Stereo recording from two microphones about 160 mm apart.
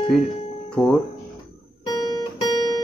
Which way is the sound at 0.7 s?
5° left (ahead or behind).